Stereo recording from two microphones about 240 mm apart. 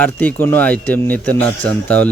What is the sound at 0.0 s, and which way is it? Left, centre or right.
A man's voice, centre.